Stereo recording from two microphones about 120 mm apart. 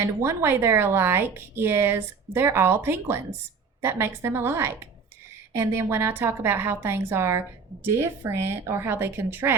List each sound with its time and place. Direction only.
0.0 s a woman's voice: 20° right (ahead or behind)